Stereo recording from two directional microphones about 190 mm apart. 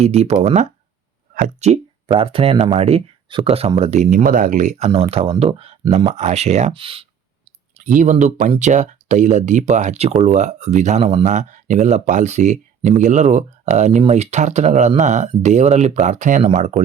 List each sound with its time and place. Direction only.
0.0 s speech: 35° right (ahead or behind)
1.7 s speech: 30° right (ahead or behind)
7.9 s speech: 40° right (ahead or behind)